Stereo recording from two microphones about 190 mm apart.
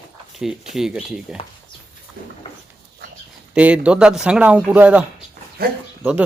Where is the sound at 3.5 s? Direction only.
5° right (ahead or behind).